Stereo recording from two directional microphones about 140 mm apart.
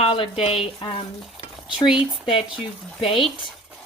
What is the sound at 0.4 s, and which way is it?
Speech, 45° left (ahead or behind).